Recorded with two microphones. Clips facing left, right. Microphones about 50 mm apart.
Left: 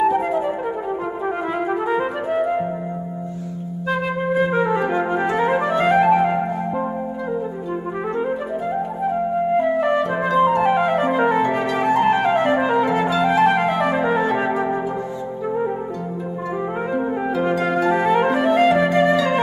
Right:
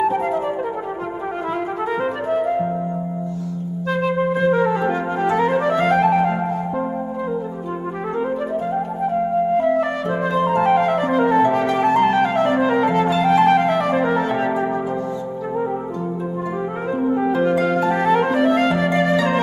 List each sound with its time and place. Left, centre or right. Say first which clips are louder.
0.0 s flute: left 1 dB; centre
1.2 s music: left 1 dB; centre
3.9 s flute: right 1 dB; centre
5.2 s music: right 5 dB; left
9.6 s flute: left 1 dB; centre
11.7 s music: right 1 dB; centre
17.5 s music: right 1 dB; left